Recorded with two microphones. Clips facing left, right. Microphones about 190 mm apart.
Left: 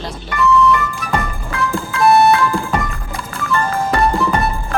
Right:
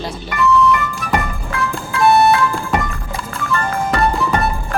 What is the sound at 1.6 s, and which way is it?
Music, centre (ahead or behind).